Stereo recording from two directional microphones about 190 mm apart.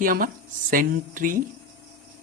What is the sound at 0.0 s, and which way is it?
Speech, 45° right (ahead or behind).